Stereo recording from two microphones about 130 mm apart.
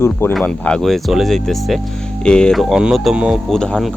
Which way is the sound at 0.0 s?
20° left (ahead or behind).